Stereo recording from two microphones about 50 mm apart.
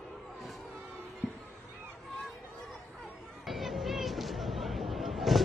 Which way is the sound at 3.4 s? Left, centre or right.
Centre.